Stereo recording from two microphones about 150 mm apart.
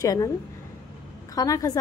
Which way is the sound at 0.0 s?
25° left (ahead or behind).